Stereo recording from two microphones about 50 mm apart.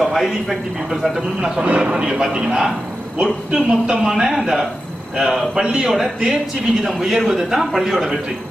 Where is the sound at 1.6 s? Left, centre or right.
Right.